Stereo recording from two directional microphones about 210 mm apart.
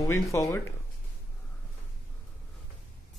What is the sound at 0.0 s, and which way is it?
Speech, 15° left (ahead or behind).